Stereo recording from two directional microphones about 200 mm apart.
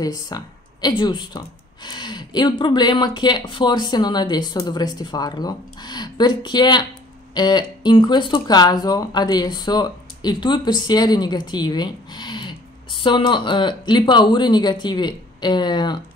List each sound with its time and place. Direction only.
0.0 s speech: 20° left (ahead or behind)